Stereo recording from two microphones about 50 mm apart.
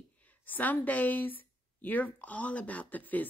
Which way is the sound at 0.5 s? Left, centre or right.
Left.